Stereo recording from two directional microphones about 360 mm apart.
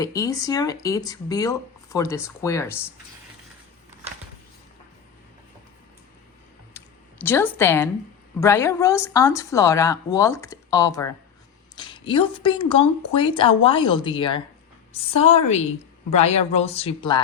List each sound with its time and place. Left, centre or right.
0.0 s speech: centre
6.7 s a sound: centre
8.4 s a woman's voice: centre